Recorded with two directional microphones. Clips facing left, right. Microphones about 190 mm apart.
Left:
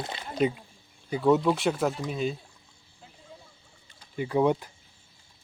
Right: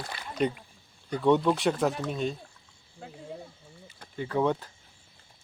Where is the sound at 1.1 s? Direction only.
5° left (ahead or behind).